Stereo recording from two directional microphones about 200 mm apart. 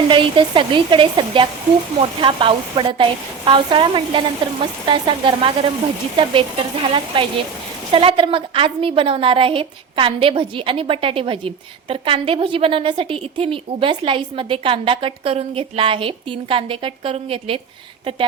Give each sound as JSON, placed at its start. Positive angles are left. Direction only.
{"t": 0.1, "sound": "a woman's voice", "side_deg": -25}